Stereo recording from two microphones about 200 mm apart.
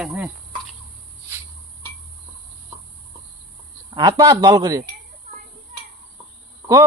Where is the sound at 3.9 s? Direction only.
20° right (ahead or behind).